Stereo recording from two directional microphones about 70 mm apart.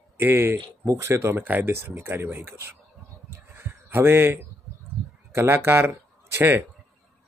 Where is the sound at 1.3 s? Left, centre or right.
Right.